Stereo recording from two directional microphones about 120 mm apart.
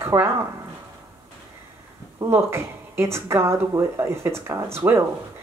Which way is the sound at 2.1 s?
20° right (ahead or behind).